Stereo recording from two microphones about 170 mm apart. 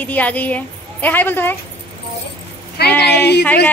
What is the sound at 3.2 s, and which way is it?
Speech, 80° left.